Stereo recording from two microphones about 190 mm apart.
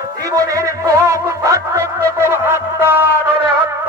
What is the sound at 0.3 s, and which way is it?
Music, 15° right (ahead or behind).